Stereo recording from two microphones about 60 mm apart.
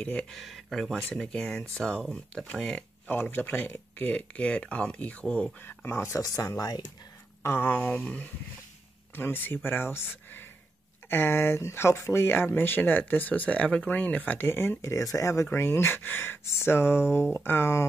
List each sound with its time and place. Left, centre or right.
0.0 s speech: centre
0.3 s speech: centre
3.1 s speech: left
6.0 s speech: left
7.4 s speech: left
7.7 s speech: left
9.1 s speech: left
14.8 s speech: left
15.4 s speech: left